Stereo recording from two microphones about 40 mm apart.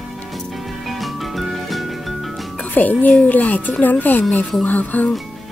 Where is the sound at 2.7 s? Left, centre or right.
Left.